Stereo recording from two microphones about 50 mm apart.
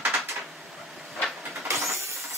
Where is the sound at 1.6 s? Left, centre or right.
Right.